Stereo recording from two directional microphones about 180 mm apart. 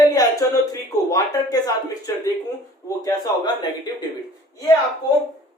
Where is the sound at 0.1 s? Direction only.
20° left (ahead or behind).